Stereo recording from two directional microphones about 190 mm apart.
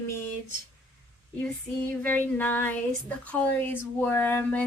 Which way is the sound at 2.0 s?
10° left (ahead or behind).